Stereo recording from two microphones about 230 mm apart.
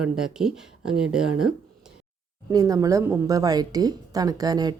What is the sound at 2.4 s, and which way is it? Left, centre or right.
A woman's voice, centre.